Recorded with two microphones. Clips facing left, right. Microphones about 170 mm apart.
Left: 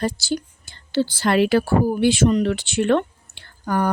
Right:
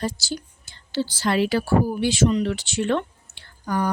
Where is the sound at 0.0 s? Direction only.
60° left (ahead or behind).